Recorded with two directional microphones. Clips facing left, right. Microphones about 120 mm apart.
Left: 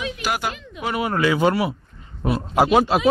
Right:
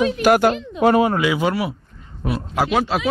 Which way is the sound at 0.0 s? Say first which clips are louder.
Right 11 dB; 50° right (ahead or behind).